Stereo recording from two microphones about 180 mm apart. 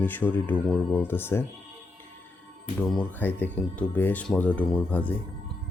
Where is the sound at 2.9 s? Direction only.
10° left (ahead or behind).